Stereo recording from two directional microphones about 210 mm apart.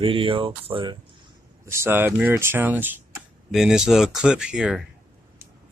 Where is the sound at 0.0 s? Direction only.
25° right (ahead or behind).